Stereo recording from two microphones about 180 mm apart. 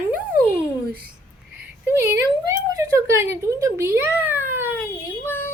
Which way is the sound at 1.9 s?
15° right (ahead or behind).